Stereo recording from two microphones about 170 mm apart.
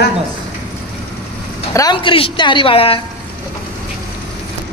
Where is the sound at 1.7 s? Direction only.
25° left (ahead or behind).